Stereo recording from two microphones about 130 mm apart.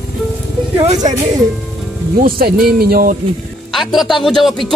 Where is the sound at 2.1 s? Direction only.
90° right.